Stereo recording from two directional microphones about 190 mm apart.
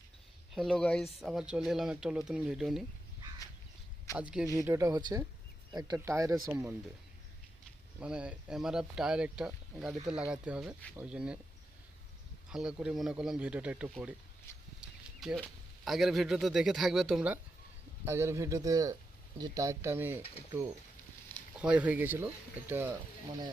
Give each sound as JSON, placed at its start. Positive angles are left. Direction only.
{"t": 0.5, "sound": "speech", "side_deg": 0}
{"t": 4.2, "sound": "speech", "side_deg": -5}
{"t": 7.9, "sound": "speech", "side_deg": -5}
{"t": 12.5, "sound": "speech", "side_deg": -5}
{"t": 21.5, "sound": "speech", "side_deg": -5}